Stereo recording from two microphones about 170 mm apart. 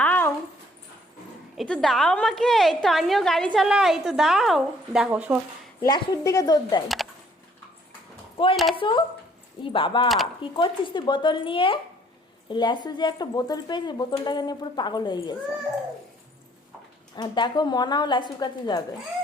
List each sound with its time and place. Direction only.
0.0 s dog: 10° left (ahead or behind)
1.5 s a woman's voice: 5° left (ahead or behind)
5.8 s speech: 20° left (ahead or behind)
6.8 s speech: centre (ahead or behind)
8.7 s speech: 30° left (ahead or behind)
17.2 s speech: 25° left (ahead or behind)